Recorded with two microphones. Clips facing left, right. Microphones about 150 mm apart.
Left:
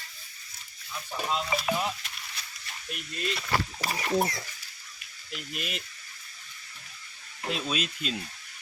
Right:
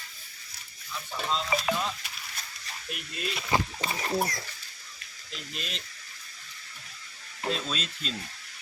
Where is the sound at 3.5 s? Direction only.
20° right (ahead or behind).